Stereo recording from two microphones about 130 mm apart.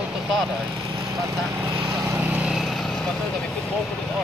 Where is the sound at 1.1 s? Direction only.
25° right (ahead or behind).